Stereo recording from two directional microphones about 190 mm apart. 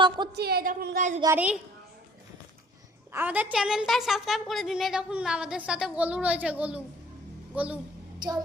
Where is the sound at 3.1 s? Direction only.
10° right (ahead or behind).